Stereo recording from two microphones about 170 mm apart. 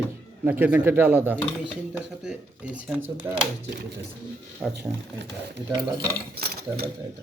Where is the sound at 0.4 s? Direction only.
10° right (ahead or behind).